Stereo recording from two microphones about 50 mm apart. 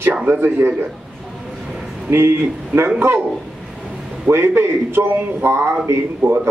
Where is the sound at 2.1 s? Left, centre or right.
Right.